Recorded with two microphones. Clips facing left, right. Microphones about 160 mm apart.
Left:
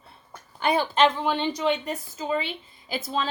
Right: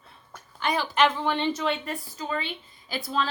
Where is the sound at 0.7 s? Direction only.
25° left (ahead or behind).